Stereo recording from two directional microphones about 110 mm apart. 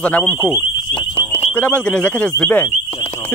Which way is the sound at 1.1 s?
60° left (ahead or behind).